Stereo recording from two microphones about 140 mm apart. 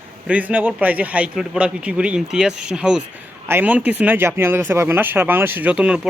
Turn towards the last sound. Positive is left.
turn(degrees=-5)  # may be behind; listen again after turning